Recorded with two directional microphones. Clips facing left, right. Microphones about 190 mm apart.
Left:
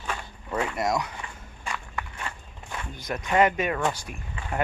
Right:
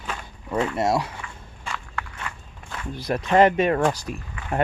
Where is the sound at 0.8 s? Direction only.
30° right (ahead or behind).